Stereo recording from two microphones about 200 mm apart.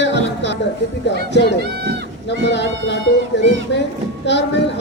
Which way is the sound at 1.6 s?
55° right (ahead or behind).